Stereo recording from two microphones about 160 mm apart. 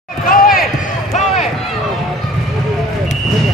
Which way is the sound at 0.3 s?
60° left (ahead or behind).